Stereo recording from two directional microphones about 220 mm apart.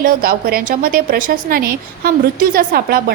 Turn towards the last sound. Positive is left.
turn(degrees=-45)  # may be behind; listen again after turning